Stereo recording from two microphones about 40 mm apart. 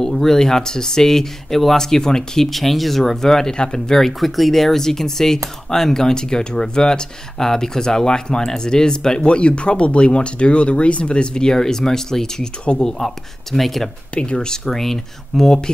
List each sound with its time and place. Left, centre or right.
0.0 s speech: centre
2.4 s speech: centre; by 12.9 s left
13.0 s speech: centre
14.1 s speech: left
14.6 s speech: centre